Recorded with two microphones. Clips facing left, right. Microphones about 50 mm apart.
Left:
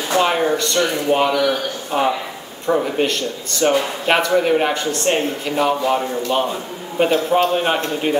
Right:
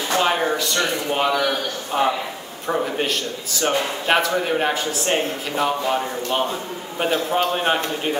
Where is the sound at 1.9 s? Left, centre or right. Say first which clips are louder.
Left 2 dB; centre.